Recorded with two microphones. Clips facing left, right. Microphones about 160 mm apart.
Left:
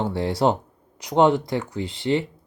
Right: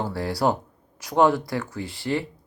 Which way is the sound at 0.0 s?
20° left (ahead or behind).